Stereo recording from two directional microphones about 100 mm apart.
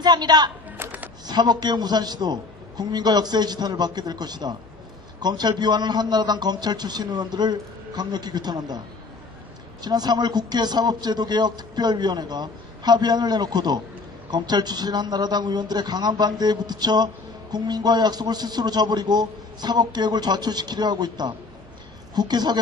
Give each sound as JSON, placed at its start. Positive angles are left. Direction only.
{"t": 0.0, "sound": "a woman's voice", "side_deg": -45}
{"t": 0.8, "sound": "a sound", "side_deg": -15}
{"t": 1.3, "sound": "a man's voice", "side_deg": -45}
{"t": 9.8, "sound": "a man's voice", "side_deg": -45}